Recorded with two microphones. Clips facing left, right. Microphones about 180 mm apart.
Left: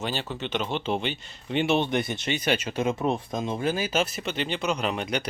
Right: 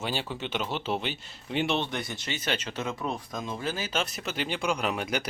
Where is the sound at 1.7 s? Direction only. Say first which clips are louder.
Left 6 dB; 15° left (ahead or behind).